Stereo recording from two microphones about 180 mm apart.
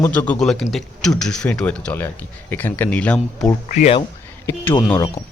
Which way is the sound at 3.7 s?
45° left (ahead or behind).